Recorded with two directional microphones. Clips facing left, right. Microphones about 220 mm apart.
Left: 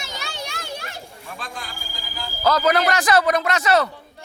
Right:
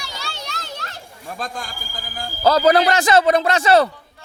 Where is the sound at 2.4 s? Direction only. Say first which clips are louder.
Right 4 dB; 30° right (ahead or behind).